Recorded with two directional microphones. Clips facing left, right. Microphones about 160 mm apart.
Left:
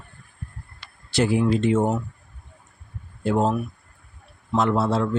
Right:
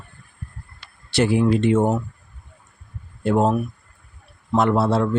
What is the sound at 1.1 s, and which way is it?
Speech, 70° right (ahead or behind).